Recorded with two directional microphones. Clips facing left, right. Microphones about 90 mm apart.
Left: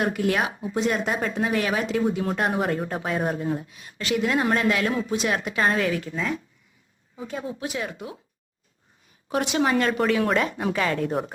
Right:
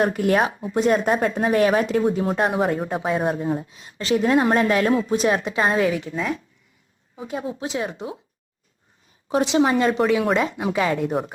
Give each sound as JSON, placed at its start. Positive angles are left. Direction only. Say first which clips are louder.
{"t": 0.0, "sound": "a woman's voice", "louder": "right 4 dB", "side_deg": -35}
{"t": 2.1, "sound": "a woman's voice", "louder": "right 4 dB", "side_deg": -25}
{"t": 2.5, "sound": "speech", "louder": "right 3 dB", "side_deg": -10}
{"t": 3.6, "sound": "a woman's voice", "louder": "right 2 dB", "side_deg": -25}
{"t": 5.3, "sound": "a woman's voice", "louder": "right 3 dB", "side_deg": -25}
{"t": 6.1, "sound": "speech", "louder": "right 3 dB", "side_deg": -5}
{"t": 7.2, "sound": "a woman's voice", "louder": "right 3 dB", "side_deg": -15}
{"t": 9.3, "sound": "a woman's voice", "louder": "right 4 dB", "side_deg": -25}
{"t": 10.1, "sound": "speech", "louder": "right 2 dB", "side_deg": -5}